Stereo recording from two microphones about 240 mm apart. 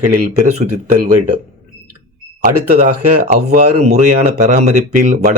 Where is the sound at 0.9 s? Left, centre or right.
Right.